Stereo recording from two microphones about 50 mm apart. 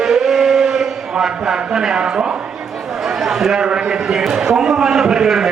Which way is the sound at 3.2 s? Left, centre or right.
Centre.